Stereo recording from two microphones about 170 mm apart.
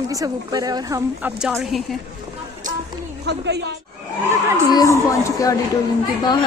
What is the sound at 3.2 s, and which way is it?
Speech, 80° right.